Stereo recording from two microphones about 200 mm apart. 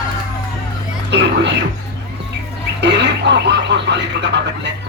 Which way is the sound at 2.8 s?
60° right (ahead or behind).